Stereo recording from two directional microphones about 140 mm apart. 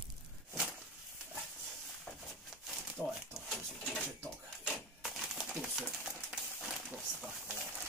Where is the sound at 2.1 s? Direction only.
Centre (ahead or behind).